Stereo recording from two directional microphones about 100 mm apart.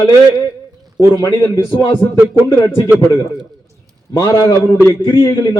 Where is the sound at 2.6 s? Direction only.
30° left (ahead or behind).